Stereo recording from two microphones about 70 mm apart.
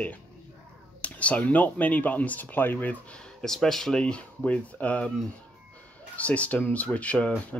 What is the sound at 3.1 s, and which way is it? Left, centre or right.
Speech, centre.